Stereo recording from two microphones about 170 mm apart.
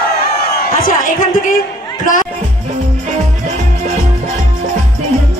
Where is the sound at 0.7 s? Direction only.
55° left (ahead or behind).